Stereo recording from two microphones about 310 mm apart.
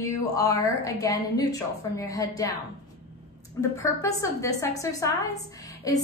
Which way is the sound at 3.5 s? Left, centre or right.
Centre.